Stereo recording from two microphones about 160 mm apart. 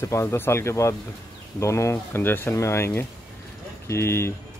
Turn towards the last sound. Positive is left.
turn(degrees=15)  # may be behind; listen again after turning